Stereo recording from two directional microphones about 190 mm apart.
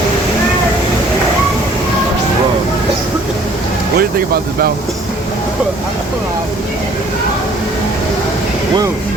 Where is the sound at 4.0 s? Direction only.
50° right (ahead or behind).